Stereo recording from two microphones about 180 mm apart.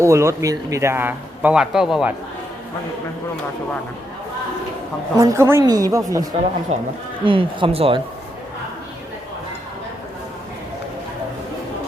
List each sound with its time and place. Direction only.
0.0 s speech: 15° right (ahead or behind)
5.1 s a woman's voice: 15° right (ahead or behind)
6.7 s a woman's voice: 40° right (ahead or behind)